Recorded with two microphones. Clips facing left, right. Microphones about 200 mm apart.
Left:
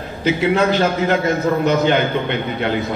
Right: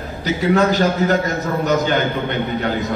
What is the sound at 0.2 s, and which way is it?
A man's voice, 40° right (ahead or behind).